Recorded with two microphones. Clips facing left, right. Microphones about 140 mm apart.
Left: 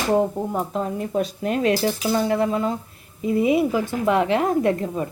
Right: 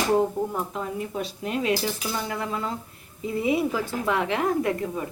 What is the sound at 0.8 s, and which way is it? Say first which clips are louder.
Speech: left 6 dB; 50° left (ahead or behind).